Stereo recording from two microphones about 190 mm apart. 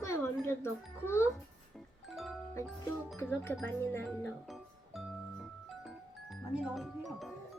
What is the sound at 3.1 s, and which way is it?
A child's voice, 15° left (ahead or behind).